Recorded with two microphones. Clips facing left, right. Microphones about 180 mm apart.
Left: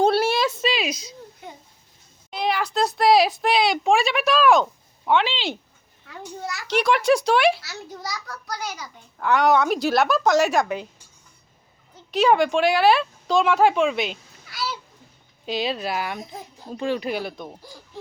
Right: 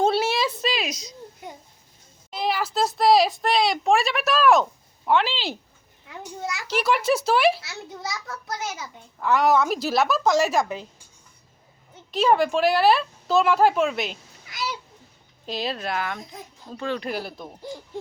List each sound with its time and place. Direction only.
0.0 s a sound: centre (ahead or behind)
2.3 s a woman's voice: centre (ahead or behind)
6.7 s speech: 5° right (ahead or behind)
7.6 s a child's voice: 25° right (ahead or behind)
9.1 s speech: centre (ahead or behind)
12.1 s speech: centre (ahead or behind)
14.5 s a sound: 15° right (ahead or behind)
15.4 s speech: centre (ahead or behind)
16.1 s a child's voice: 20° left (ahead or behind)
17.0 s speech: centre (ahead or behind)